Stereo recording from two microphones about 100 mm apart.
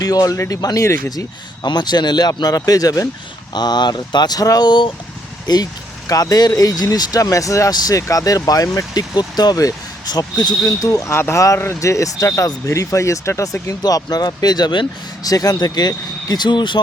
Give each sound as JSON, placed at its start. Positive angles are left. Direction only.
{"t": 0.0, "sound": "speech", "side_deg": 40}
{"t": 1.6, "sound": "speech", "side_deg": 45}
{"t": 3.5, "sound": "speech", "side_deg": 45}